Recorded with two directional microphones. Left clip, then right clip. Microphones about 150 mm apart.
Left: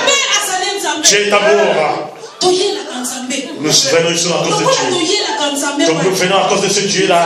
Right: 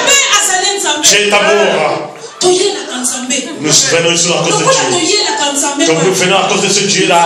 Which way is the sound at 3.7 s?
55° left (ahead or behind).